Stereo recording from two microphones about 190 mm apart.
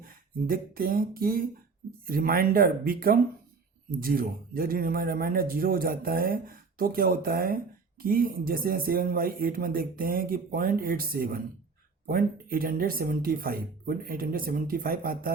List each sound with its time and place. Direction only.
0.0 s a man's voice: 50° right (ahead or behind)